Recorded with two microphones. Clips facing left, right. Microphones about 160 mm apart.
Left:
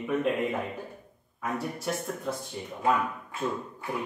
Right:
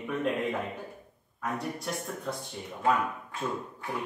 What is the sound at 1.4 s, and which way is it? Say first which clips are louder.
Speech: left 2 dB; centre (ahead or behind).